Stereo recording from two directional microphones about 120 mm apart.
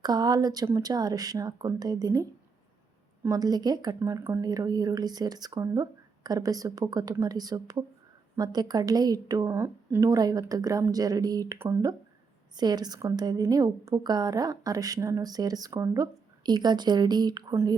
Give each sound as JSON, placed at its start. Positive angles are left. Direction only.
{"t": 0.0, "sound": "a woman's voice", "side_deg": -35}
{"t": 3.2, "sound": "a woman's voice", "side_deg": -30}
{"t": 11.5, "sound": "speech", "side_deg": -20}
{"t": 12.5, "sound": "a woman's voice", "side_deg": -35}
{"t": 17.5, "sound": "speech", "side_deg": -20}